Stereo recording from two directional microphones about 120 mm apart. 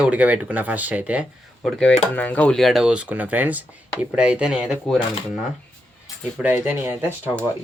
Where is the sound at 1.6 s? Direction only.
5° left (ahead or behind).